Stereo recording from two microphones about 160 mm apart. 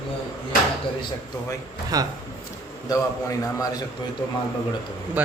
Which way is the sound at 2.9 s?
20° left (ahead or behind).